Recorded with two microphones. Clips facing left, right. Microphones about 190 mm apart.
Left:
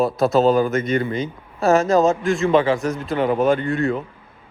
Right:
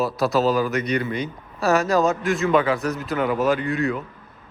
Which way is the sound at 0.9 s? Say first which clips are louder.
Left 3 dB; 25° left (ahead or behind).